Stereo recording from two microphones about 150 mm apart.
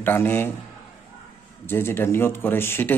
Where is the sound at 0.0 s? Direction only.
15° left (ahead or behind).